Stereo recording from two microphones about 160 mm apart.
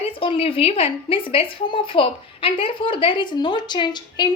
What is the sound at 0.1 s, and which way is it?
A woman's voice, 35° left (ahead or behind).